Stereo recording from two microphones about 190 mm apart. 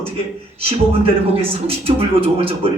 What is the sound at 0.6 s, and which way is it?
Speech, 30° right (ahead or behind).